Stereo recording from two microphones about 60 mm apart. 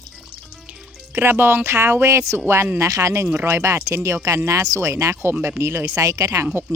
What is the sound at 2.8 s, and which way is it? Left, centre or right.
Speech, right.